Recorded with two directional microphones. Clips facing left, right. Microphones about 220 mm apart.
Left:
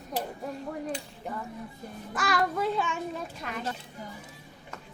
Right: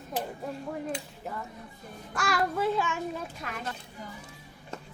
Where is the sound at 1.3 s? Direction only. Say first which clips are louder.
Left 4 dB; 5° right (ahead or behind).